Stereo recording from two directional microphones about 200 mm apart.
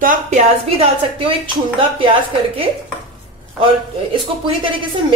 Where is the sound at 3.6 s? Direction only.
25° right (ahead or behind).